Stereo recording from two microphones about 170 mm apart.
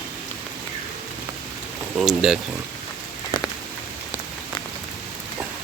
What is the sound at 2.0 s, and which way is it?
Speech, centre (ahead or behind).